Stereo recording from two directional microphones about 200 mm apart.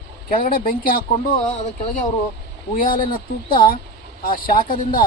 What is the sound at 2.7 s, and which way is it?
Speech, 45° left (ahead or behind).